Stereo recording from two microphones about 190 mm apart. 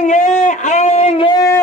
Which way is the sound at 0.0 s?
40° left (ahead or behind).